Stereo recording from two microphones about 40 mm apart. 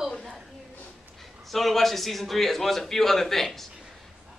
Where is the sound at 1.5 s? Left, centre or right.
Centre.